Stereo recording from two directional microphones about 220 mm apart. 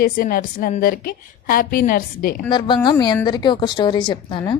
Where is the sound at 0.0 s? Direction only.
40° left (ahead or behind).